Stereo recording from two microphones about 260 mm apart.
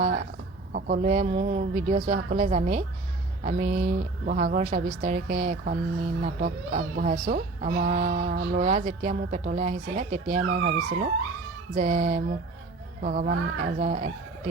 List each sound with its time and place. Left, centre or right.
0.7 s speech: right